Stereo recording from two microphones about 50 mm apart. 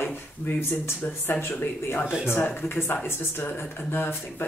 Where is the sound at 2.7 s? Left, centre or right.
Left.